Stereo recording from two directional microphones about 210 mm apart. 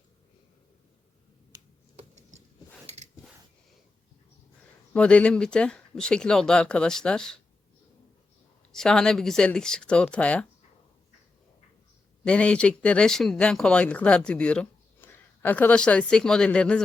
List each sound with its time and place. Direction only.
2.8 s a sound: 30° right (ahead or behind)
4.9 s speech: 5° left (ahead or behind)
8.7 s speech: centre (ahead or behind)
12.2 s speech: 5° left (ahead or behind)